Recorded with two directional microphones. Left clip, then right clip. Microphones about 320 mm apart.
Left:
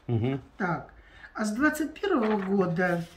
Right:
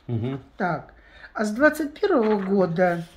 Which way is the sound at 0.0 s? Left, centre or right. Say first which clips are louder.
Even; centre.